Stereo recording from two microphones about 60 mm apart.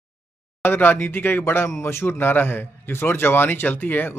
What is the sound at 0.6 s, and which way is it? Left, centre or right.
A man's voice, left.